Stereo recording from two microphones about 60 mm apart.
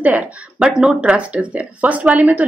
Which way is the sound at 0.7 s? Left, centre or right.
Centre.